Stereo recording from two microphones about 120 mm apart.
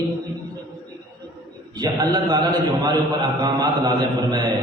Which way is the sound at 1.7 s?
40° right (ahead or behind).